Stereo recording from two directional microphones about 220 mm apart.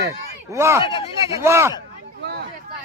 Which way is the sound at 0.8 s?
20° left (ahead or behind).